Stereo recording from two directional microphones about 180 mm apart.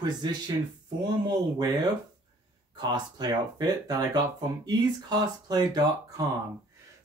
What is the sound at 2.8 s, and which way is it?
Speech, 25° right (ahead or behind).